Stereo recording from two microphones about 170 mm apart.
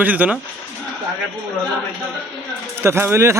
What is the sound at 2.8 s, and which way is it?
Speech, 15° right (ahead or behind).